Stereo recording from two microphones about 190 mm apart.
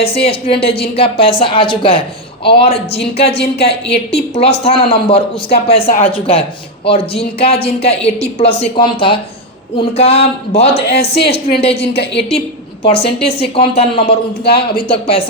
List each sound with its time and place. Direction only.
0.0 s speech: 30° left (ahead or behind)
3.3 s a woman's voice: 60° left (ahead or behind)
4.1 s speech: 30° left (ahead or behind)
10.8 s a woman's voice: 60° left (ahead or behind)
12.8 s speech: 30° left (ahead or behind)
14.4 s speech: 55° left (ahead or behind)
14.8 s speech: 30° left (ahead or behind)